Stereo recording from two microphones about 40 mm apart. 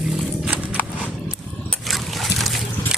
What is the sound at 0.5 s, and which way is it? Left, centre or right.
Horse, right.